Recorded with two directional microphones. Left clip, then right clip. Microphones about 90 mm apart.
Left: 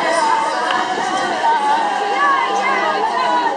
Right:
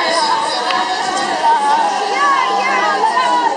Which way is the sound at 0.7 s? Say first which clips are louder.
Right 1 dB; 35° right (ahead or behind).